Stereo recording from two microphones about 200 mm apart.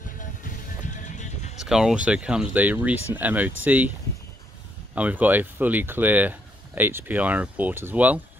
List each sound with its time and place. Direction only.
0.2 s music: 40° left (ahead or behind)
1.6 s speech: centre (ahead or behind)
4.9 s speech: 5° right (ahead or behind)